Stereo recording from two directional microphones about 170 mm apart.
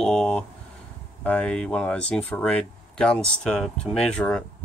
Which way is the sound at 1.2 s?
5° left (ahead or behind).